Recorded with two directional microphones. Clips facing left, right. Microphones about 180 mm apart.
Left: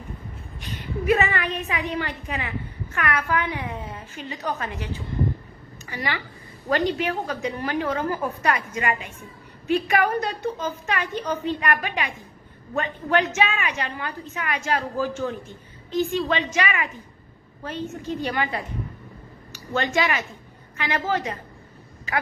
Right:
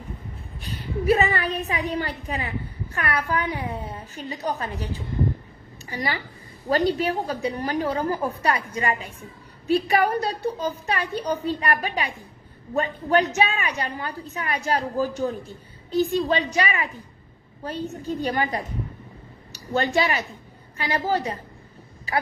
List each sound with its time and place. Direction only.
0.6 s a woman's voice: 35° right (ahead or behind)